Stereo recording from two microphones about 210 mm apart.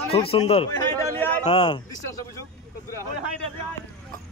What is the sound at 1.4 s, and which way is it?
Speech, 25° left (ahead or behind).